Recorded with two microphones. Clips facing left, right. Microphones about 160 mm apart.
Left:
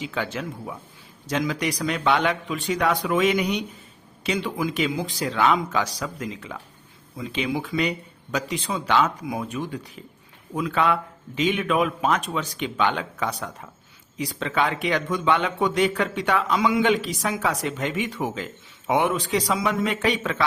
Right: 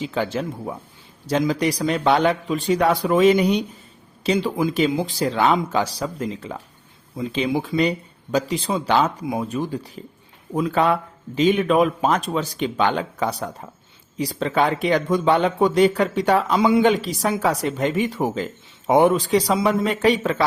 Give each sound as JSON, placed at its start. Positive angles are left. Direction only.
{"t": 0.0, "sound": "speech", "side_deg": -30}